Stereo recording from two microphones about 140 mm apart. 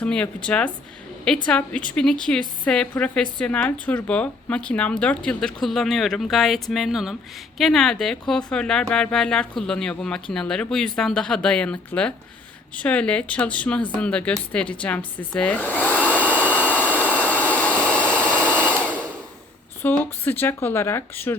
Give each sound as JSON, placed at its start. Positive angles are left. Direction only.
{"t": 0.0, "sound": "speech", "side_deg": 5}
{"t": 16.3, "sound": "vacuum cleaner", "side_deg": -10}
{"t": 16.6, "sound": "jet engine", "side_deg": 10}
{"t": 17.4, "sound": "vacuum cleaner", "side_deg": 10}
{"t": 17.9, "sound": "a sound", "side_deg": -15}
{"t": 19.8, "sound": "speech", "side_deg": 15}